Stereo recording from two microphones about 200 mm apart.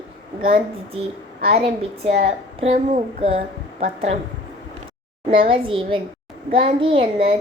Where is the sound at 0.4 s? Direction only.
30° right (ahead or behind).